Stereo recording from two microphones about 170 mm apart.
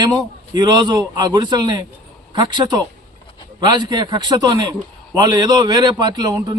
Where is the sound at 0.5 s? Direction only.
25° right (ahead or behind).